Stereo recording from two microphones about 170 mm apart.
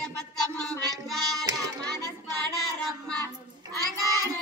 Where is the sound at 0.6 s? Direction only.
5° left (ahead or behind).